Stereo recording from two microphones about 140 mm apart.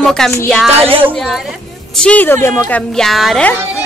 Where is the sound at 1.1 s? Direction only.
Centre (ahead or behind); by 2.8 s 15° left (ahead or behind).